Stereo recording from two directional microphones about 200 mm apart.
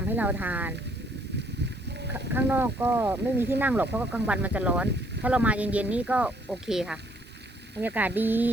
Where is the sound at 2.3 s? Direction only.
10° right (ahead or behind).